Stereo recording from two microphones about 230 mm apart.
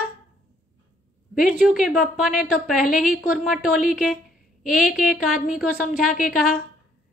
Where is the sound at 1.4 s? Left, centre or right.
Centre.